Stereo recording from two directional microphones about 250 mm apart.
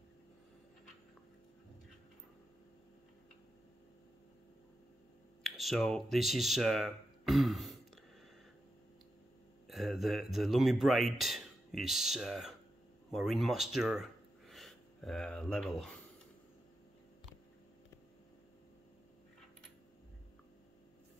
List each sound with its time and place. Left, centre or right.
5.4 s speech: centre
9.7 s speech: centre